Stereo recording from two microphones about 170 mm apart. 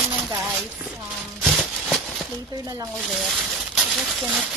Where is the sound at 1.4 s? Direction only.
Centre (ahead or behind).